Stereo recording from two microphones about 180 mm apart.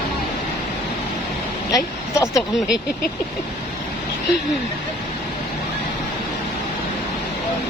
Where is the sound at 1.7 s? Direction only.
15° left (ahead or behind).